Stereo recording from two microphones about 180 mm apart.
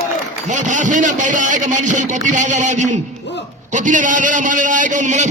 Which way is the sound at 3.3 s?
75° left (ahead or behind).